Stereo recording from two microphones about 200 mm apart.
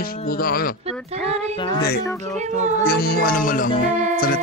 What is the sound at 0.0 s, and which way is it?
Speech, 45° left (ahead or behind).